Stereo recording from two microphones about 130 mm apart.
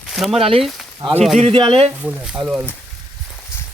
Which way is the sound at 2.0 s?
10° right (ahead or behind).